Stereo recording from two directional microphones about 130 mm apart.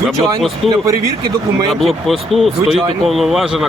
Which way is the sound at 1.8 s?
Centre (ahead or behind).